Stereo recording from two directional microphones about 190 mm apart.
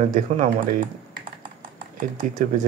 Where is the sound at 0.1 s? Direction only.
40° right (ahead or behind).